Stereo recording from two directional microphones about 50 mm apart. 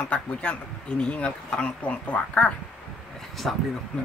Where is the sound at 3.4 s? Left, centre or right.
Centre.